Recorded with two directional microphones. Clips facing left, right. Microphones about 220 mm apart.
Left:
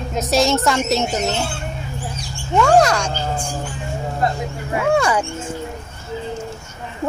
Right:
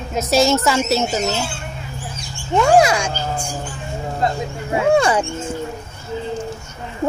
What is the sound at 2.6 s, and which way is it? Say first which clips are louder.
Speech: right 1 dB; 10° right (ahead or behind).